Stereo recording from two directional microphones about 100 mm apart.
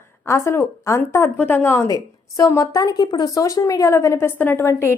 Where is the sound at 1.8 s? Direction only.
35° left (ahead or behind).